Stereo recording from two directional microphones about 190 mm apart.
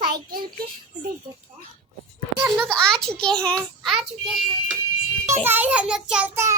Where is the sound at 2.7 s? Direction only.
5° left (ahead or behind).